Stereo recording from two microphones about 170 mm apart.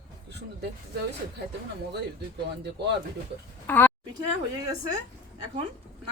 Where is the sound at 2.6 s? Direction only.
75° right (ahead or behind).